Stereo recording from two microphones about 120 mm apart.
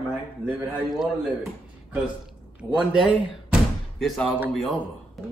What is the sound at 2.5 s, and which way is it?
Speech, 10° right (ahead or behind).